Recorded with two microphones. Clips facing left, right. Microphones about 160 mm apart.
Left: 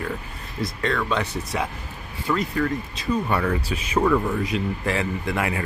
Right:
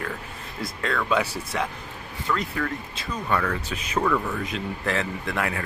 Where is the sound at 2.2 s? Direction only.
5° left (ahead or behind).